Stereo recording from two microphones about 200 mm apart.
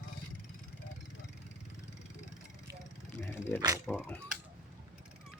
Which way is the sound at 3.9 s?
5° right (ahead or behind).